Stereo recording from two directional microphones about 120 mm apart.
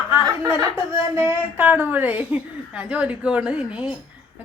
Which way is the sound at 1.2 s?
20° right (ahead or behind).